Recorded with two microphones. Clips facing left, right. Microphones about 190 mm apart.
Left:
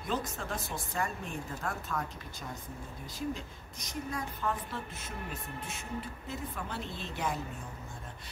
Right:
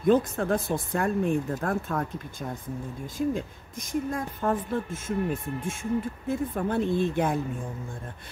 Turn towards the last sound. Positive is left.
turn(degrees=-55)  # may be behind; listen again after turning